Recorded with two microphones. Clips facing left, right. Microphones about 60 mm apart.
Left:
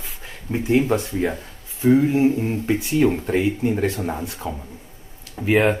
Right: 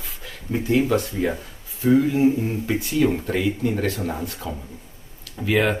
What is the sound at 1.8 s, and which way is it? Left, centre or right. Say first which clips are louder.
Speech: left 1 dB; left.